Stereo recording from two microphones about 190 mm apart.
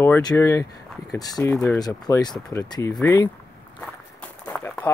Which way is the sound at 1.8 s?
20° left (ahead or behind).